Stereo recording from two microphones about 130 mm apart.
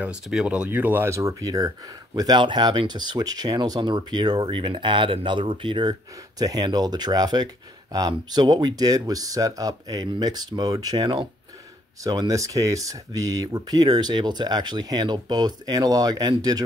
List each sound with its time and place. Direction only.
0.0 s speech: 5° right (ahead or behind); by 16.6 s 30° right (ahead or behind)